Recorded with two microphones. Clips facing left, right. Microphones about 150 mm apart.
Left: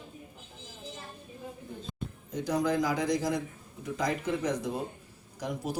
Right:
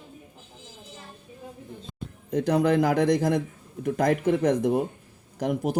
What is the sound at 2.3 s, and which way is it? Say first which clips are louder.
Speech: right 7 dB; 65° right (ahead or behind).